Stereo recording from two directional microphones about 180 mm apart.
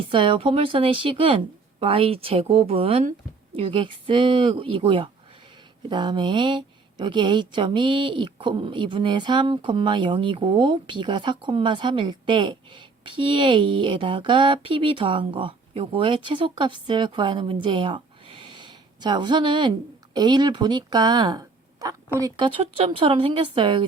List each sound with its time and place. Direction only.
0.1 s a woman's voice: 30° right (ahead or behind)